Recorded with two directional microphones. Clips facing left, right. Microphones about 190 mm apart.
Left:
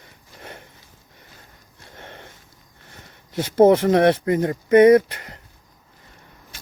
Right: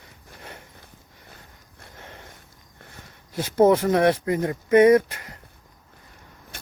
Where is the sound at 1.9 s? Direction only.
60° left (ahead or behind).